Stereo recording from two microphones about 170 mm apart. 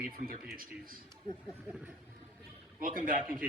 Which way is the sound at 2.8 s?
55° right (ahead or behind).